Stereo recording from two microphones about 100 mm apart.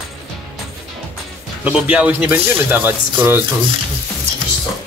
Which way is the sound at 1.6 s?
10° right (ahead or behind).